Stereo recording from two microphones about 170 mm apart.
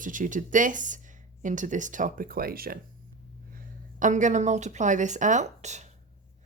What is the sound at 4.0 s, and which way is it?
Speech, 45° right (ahead or behind).